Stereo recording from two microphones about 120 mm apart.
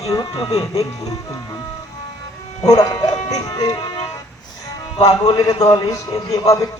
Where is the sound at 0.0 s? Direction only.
30° left (ahead or behind).